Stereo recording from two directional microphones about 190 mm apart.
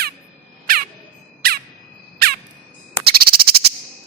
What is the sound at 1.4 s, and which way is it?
Bird, 55° right (ahead or behind).